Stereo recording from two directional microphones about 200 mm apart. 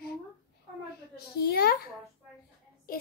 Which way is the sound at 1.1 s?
50° left (ahead or behind).